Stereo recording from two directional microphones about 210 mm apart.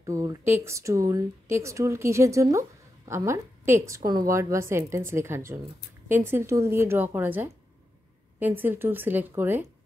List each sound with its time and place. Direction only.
0.0 s a woman's voice: 15° right (ahead or behind)